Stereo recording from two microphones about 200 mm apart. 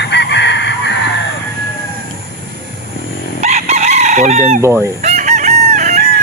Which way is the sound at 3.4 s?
35° right (ahead or behind).